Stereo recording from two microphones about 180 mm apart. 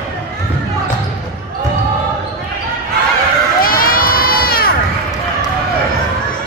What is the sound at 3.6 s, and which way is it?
Crowd, 55° left (ahead or behind).